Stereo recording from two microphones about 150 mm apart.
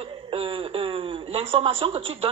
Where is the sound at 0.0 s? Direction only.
40° right (ahead or behind).